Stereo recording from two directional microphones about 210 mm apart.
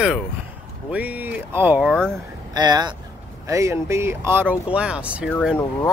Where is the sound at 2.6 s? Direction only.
20° right (ahead or behind).